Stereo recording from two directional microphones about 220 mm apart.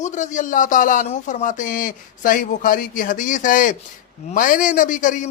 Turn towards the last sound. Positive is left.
turn(degrees=35)  # may be behind; listen again after turning